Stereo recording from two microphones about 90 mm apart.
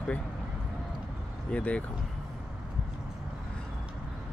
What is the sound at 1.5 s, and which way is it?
Speech, 15° left (ahead or behind).